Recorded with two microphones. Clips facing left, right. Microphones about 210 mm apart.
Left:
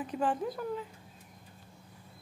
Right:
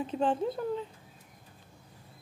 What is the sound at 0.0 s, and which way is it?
Speech, 25° right (ahead or behind).